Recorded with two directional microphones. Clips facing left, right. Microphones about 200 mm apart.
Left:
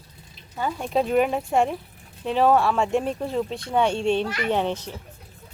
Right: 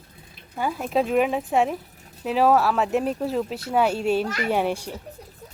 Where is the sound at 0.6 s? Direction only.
5° right (ahead or behind).